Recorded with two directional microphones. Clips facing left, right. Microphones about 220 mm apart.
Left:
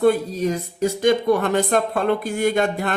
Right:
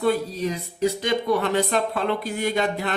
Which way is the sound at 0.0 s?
50° left (ahead or behind).